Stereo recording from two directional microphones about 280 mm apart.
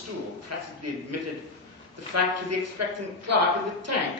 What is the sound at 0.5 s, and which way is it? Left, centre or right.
Speech, right.